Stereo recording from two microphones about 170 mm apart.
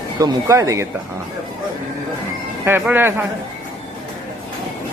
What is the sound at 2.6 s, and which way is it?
Speech, 10° right (ahead or behind).